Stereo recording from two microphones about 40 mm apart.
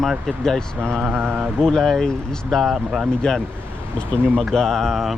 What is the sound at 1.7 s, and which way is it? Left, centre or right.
Speech, centre.